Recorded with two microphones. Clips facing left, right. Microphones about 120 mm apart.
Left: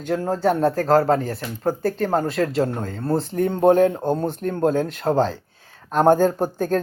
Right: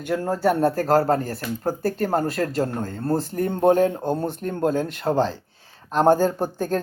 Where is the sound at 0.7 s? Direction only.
5° right (ahead or behind).